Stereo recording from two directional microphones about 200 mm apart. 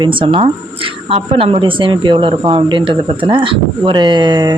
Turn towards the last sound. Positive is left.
turn(degrees=-20)  # may be behind; listen again after turning